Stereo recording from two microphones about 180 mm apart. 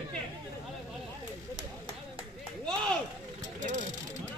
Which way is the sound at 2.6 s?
5° left (ahead or behind).